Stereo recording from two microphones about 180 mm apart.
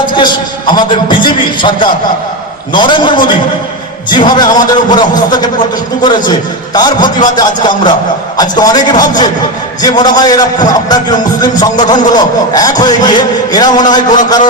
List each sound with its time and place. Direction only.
0.0 s a man's voice: 25° left (ahead or behind)
2.7 s music: 25° left (ahead or behind)